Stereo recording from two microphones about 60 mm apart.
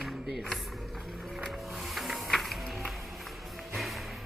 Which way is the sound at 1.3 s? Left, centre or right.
Centre.